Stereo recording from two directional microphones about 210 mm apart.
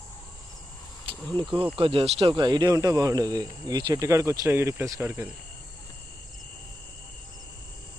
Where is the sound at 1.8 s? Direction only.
25° right (ahead or behind).